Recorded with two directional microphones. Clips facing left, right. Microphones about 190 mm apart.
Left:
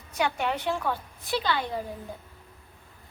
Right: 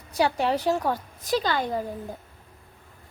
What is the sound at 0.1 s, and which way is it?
A woman's voice, 35° right (ahead or behind).